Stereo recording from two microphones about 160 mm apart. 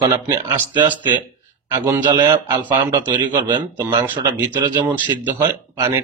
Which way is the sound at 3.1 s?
30° right (ahead or behind).